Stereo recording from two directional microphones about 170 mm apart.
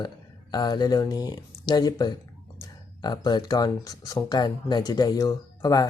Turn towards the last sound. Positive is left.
turn(degrees=20)  # may be behind; listen again after turning